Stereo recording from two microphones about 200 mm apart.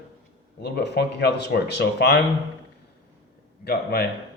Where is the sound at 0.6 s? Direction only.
55° left (ahead or behind).